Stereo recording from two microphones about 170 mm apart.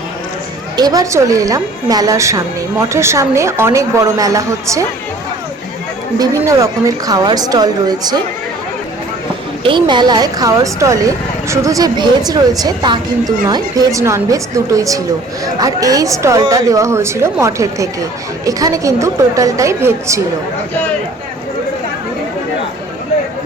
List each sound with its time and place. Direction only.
0.8 s a woman's voice: 20° right (ahead or behind)
6.1 s a woman's voice: 20° right (ahead or behind)
9.6 s a woman's voice: 30° right (ahead or behind)